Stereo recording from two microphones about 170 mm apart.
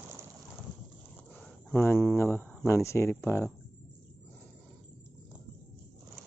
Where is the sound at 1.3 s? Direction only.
10° left (ahead or behind).